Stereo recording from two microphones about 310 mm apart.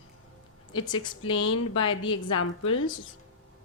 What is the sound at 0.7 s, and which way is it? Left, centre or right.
Speech, centre.